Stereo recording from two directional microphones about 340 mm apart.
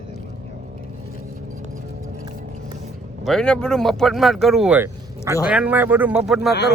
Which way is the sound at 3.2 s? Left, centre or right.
Centre.